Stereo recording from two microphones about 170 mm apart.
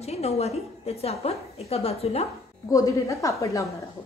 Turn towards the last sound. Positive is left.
turn(degrees=20)  # may be behind; listen again after turning